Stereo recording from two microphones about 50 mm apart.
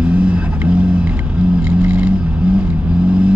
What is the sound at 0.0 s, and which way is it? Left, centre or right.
Vehicle, right.